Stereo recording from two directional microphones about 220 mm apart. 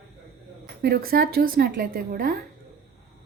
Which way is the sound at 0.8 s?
45° right (ahead or behind).